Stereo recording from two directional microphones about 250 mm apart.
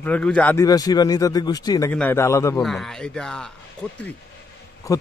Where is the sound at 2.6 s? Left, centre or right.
Centre.